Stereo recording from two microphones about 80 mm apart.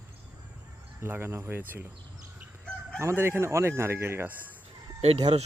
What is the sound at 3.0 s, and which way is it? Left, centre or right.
Fowl, right.